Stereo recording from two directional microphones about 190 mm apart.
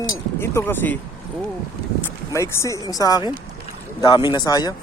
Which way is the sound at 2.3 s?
15° left (ahead or behind).